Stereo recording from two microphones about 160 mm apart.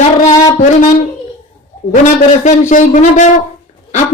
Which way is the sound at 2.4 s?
50° left (ahead or behind).